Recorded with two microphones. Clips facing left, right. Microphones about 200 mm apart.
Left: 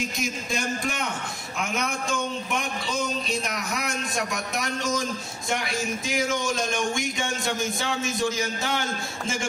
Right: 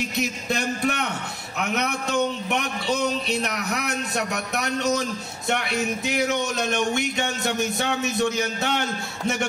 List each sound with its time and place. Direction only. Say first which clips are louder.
0.2 s a man's voice: right 6 dB; 65° right (ahead or behind)